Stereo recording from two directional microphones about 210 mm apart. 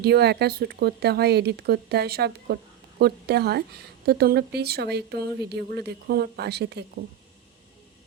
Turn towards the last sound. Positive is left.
turn(degrees=-55)  # may be behind; listen again after turning